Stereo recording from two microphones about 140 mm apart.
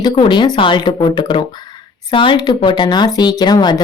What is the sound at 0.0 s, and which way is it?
Speech, 35° left (ahead or behind).